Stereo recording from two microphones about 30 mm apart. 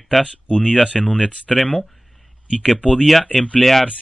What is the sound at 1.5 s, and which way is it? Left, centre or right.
Speech, centre.